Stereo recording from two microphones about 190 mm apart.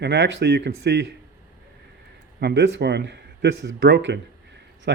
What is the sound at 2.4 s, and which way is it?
Speech, 65° right (ahead or behind).